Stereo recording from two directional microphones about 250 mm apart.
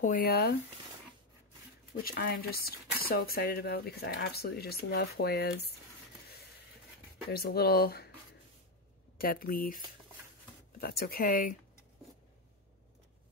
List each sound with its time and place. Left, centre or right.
0.0 s speech: left
2.0 s speech: left
7.2 s speech: left
9.2 s speech: left
10.8 s speech: left